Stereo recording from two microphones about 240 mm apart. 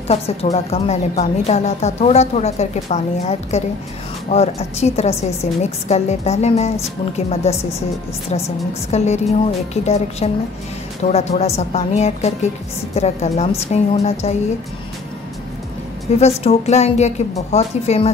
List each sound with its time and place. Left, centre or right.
0.1 s a woman's voice: left
8.9 s a woman's voice: left
16.2 s a woman's voice: left